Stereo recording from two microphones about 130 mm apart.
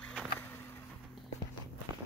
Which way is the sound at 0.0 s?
10° left (ahead or behind).